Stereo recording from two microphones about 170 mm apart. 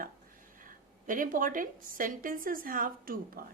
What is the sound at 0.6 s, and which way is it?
A woman's voice, 50° right (ahead or behind).